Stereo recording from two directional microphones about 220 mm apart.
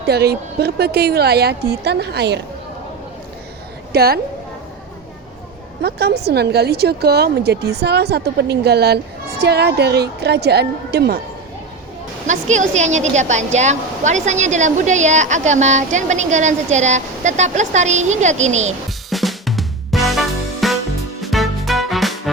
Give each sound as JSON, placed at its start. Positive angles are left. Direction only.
{"t": 0.0, "sound": "a woman's voice", "side_deg": -45}
{"t": 3.9, "sound": "a woman's voice", "side_deg": -45}
{"t": 5.8, "sound": "a woman's voice", "side_deg": -45}
{"t": 12.3, "sound": "a woman's voice", "side_deg": -35}
{"t": 18.9, "sound": "music", "side_deg": 0}